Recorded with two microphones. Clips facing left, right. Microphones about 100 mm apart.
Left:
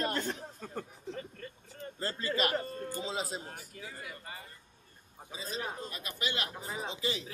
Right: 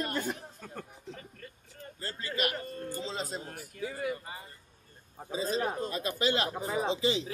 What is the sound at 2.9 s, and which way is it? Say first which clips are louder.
Speech: right 1 dB; 10° left (ahead or behind).